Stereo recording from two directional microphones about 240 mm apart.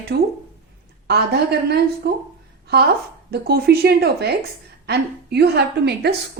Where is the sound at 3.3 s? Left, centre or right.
Right.